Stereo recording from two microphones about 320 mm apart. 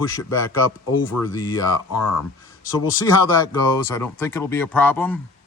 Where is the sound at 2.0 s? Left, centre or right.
Left.